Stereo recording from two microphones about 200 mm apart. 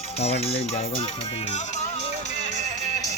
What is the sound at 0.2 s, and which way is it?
Speech, 30° left (ahead or behind).